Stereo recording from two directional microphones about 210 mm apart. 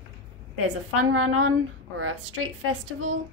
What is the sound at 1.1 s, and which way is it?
Speech, 85° right.